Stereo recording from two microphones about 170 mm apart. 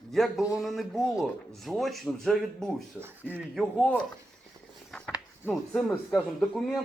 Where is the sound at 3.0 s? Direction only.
10° right (ahead or behind).